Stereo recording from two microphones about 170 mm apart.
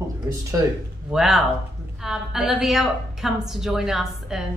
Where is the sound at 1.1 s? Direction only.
Centre (ahead or behind).